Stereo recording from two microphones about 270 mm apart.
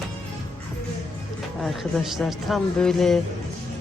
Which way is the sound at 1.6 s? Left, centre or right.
Centre.